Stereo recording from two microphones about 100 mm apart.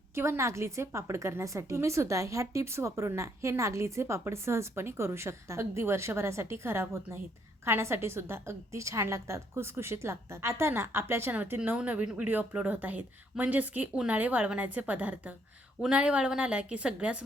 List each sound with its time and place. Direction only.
0.1 s a woman's voice: 25° right (ahead or behind)